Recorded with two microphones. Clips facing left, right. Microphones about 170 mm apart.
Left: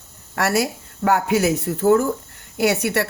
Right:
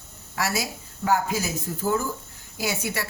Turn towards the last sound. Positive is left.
turn(degrees=70)  # may be behind; listen again after turning